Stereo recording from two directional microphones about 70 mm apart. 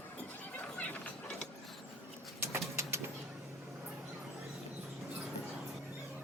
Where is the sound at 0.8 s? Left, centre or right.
Centre.